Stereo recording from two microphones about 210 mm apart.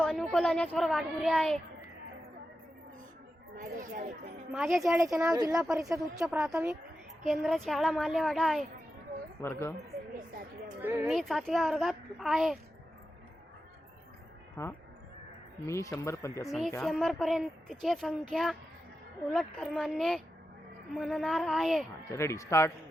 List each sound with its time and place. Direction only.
0.0 s speech: 5° left (ahead or behind)
3.6 s speech: 40° right (ahead or behind)
4.5 s speech: 5° right (ahead or behind)
5.3 s a woman's voice: 15° right (ahead or behind)
6.1 s speech: 5° right (ahead or behind)
9.4 s speech: 10° left (ahead or behind)
10.2 s speech: 40° right (ahead or behind)
10.8 s a woman's voice: 10° right (ahead or behind)
11.1 s speech: centre (ahead or behind)
14.5 s speech: 10° left (ahead or behind)
16.5 s speech: centre (ahead or behind)
22.1 s speech: 15° left (ahead or behind)